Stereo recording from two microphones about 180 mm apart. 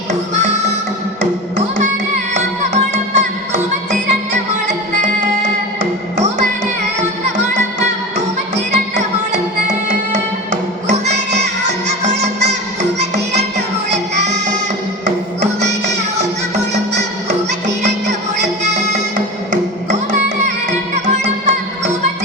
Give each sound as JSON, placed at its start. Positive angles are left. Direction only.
{"t": 0.1, "sound": "music", "side_deg": -40}
{"t": 2.3, "sound": "music", "side_deg": -40}
{"t": 8.5, "sound": "music", "side_deg": -40}
{"t": 13.9, "sound": "music", "side_deg": -40}
{"t": 16.6, "sound": "music", "side_deg": -40}
{"t": 18.6, "sound": "music", "side_deg": -40}
{"t": 20.9, "sound": "music", "side_deg": -40}